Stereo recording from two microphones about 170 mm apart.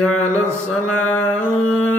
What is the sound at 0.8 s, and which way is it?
Music, 5° left (ahead or behind).